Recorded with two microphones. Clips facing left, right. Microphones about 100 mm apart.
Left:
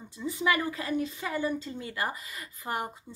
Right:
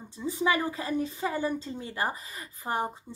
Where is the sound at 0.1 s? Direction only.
30° right (ahead or behind).